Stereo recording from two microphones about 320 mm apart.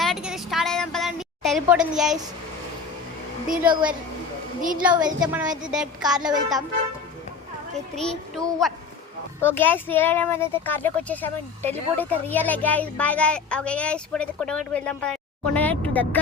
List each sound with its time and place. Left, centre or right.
0.0 s a sound: centre
3.6 s a woman's voice: centre
4.8 s speech: centre
7.9 s speech: centre